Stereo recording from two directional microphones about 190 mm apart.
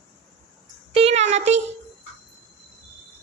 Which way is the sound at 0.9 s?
35° right (ahead or behind).